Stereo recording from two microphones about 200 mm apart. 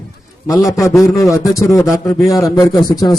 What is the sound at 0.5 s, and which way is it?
Speech, centre (ahead or behind).